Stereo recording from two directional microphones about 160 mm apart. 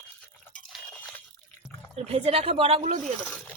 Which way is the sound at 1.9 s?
40° right (ahead or behind).